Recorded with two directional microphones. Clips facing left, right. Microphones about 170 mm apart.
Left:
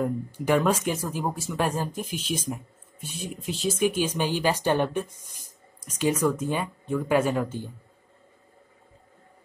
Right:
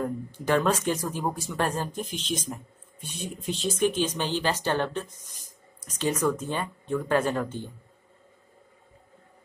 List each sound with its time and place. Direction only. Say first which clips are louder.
0.0 s speech: left 3 dB; 10° left (ahead or behind)